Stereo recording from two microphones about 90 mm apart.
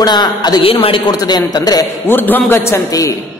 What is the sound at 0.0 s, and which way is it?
Speech, 55° left (ahead or behind).